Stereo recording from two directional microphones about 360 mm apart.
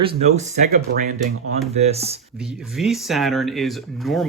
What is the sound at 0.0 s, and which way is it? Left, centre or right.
Speech, centre.